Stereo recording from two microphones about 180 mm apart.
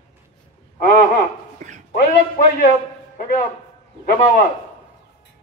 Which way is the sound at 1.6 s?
45° right (ahead or behind).